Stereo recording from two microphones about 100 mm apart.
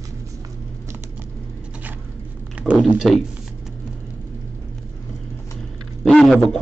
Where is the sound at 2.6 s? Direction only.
15° right (ahead or behind).